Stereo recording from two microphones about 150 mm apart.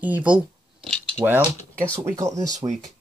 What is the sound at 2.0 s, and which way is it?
Speech, 20° right (ahead or behind).